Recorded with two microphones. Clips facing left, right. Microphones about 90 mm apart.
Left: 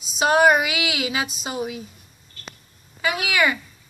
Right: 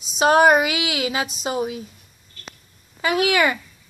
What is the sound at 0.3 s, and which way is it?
Speech, 40° right (ahead or behind).